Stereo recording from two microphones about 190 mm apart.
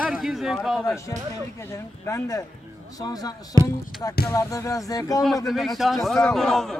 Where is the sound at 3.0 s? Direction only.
20° left (ahead or behind).